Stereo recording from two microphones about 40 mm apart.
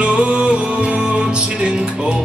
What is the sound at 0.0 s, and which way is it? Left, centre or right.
Music, right.